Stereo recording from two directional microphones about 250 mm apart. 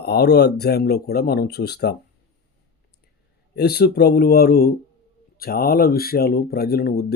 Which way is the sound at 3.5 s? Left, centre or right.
Left.